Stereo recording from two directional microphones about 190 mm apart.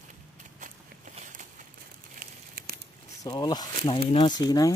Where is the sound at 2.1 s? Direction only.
55° right (ahead or behind).